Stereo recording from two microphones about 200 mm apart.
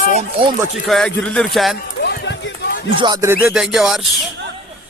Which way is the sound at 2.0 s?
55° left (ahead or behind).